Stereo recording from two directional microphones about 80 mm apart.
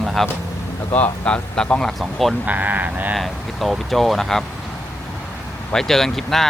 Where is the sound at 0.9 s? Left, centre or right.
Centre.